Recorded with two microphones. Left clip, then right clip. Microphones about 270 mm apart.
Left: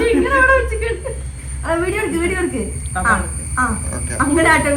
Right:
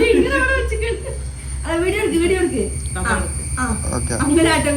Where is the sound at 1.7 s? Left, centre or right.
Centre.